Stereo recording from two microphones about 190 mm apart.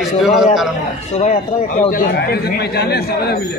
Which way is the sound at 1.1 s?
35° left (ahead or behind).